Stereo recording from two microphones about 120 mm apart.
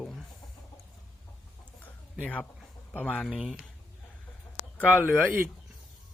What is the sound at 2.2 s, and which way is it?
Speech, 10° left (ahead or behind).